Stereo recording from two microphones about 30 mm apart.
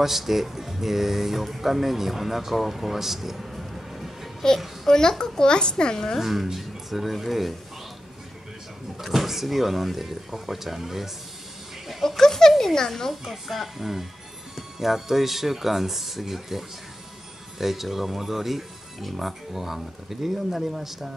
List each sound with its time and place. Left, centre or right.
0.0 s speech: centre
3.3 s music: centre
4.8 s a child's voice: left
6.1 s speech: centre
8.9 s speech: centre
12.2 s a sound: centre
13.1 s speech: centre